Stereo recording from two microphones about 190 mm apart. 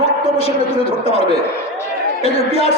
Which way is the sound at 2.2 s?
30° left (ahead or behind).